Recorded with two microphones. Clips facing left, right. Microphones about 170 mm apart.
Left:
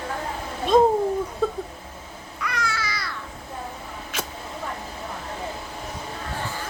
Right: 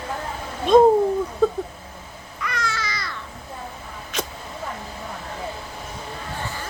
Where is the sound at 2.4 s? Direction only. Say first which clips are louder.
Even; 10° left (ahead or behind).